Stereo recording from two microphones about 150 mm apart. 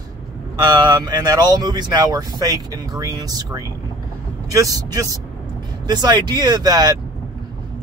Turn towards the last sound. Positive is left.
turn(degrees=-25)  # may be behind; listen again after turning